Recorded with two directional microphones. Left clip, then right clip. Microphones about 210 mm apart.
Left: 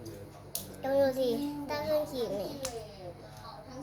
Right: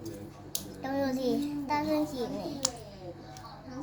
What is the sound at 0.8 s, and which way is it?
Speech, 10° left (ahead or behind).